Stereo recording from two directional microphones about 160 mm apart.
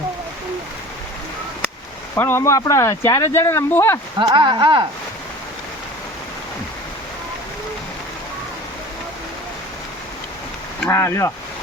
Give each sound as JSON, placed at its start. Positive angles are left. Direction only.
{"t": 2.1, "sound": "speech", "side_deg": 15}
{"t": 4.2, "sound": "speech", "side_deg": -30}
{"t": 10.8, "sound": "speech", "side_deg": 15}